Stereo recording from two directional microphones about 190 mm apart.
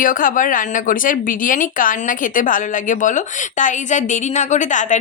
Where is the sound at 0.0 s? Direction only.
45° left (ahead or behind).